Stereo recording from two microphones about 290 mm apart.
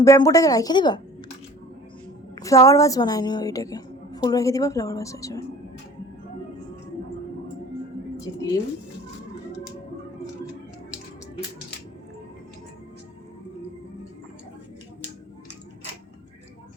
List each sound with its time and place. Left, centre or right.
0.0 s a woman's voice: centre
2.3 s a woman's voice: centre
8.1 s speech: centre